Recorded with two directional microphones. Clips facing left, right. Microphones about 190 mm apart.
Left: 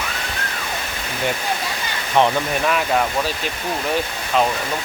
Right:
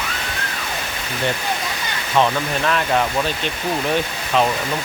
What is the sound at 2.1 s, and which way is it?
Speech, 15° left (ahead or behind).